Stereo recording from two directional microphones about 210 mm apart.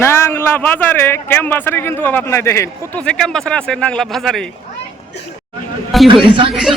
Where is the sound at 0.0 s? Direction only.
10° left (ahead or behind).